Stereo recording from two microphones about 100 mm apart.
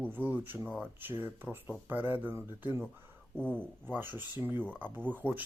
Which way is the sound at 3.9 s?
20° right (ahead or behind).